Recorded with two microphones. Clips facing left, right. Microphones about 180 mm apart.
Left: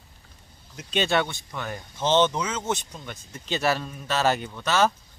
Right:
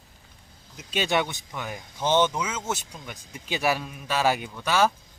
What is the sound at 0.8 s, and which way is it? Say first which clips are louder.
Speech: left 1 dB; 5° right (ahead or behind).